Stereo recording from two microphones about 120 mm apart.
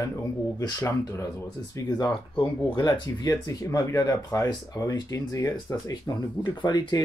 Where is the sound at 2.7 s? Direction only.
40° left (ahead or behind).